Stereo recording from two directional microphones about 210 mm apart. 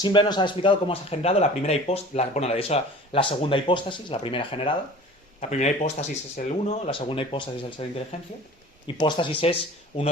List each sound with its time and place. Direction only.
0.0 s speech: 20° left (ahead or behind)